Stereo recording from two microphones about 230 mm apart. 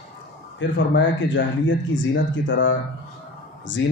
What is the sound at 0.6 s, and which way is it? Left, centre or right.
Speech, left.